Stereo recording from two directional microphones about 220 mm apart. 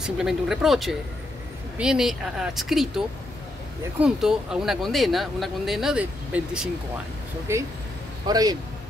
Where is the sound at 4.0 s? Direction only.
Centre (ahead or behind).